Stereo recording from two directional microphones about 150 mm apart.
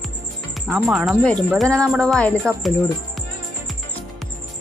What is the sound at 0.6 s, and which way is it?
Speech, 5° right (ahead or behind).